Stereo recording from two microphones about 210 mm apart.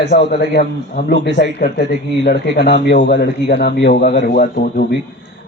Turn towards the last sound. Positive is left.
turn(degrees=50)  # may be behind; listen again after turning